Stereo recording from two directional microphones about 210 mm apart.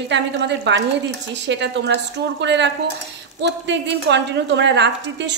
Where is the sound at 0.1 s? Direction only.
55° right (ahead or behind).